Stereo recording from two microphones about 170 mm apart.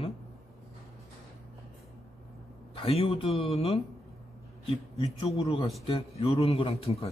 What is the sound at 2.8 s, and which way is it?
A man's voice, 35° left (ahead or behind).